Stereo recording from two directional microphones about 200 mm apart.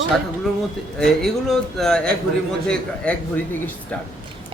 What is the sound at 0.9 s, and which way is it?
A man's voice, centre (ahead or behind).